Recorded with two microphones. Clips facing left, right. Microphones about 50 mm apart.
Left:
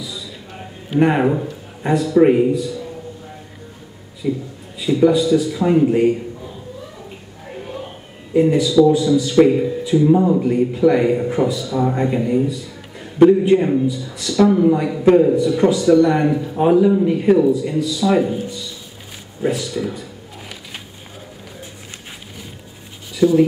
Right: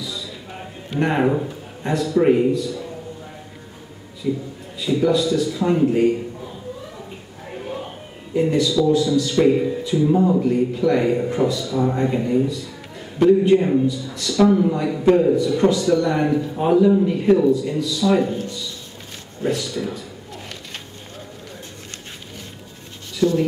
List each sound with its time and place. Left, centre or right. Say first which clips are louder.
0.0 s a sound: even; centre
0.8 s speech: left 4 dB; centre
4.2 s speech: left 2 dB; centre
8.4 s a man's voice: left 5 dB; centre
23.1 s speech: left 5 dB; centre